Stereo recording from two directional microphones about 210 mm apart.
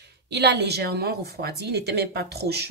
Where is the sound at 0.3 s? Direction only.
55° right (ahead or behind).